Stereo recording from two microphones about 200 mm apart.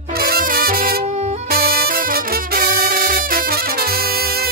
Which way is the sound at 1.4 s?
45° right (ahead or behind).